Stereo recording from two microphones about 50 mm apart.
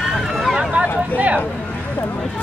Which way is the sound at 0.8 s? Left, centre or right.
Right.